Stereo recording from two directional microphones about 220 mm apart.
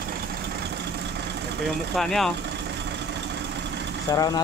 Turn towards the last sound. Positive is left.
turn(degrees=20)  # may be behind; listen again after turning